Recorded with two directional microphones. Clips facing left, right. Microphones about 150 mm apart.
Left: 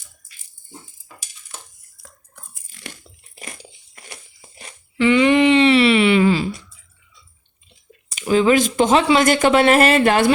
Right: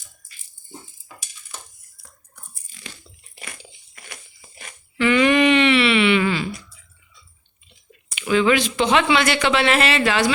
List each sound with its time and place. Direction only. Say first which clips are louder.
2.0 s biting: left 4 dB; 80° left
2.9 s a sound: left 2 dB; 40° left (ahead or behind)
8.3 s speech: left 3 dB; 40° left (ahead or behind)